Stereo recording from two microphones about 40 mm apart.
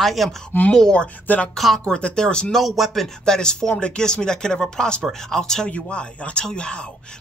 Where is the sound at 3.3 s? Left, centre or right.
Centre.